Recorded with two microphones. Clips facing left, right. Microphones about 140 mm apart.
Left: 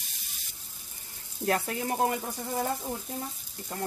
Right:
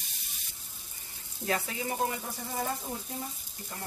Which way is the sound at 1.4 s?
55° left (ahead or behind).